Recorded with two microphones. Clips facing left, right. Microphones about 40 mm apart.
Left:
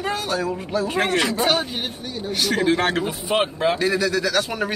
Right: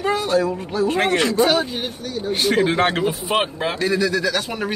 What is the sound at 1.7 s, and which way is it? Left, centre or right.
Speech, left.